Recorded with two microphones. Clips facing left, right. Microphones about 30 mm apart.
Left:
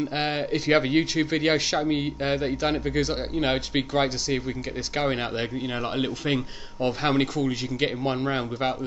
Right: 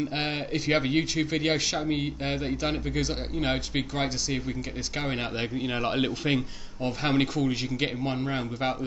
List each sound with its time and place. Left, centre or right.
0.1 s speech: centre
8.0 s speech: centre